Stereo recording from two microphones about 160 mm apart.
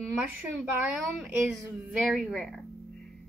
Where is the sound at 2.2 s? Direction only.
Centre (ahead or behind).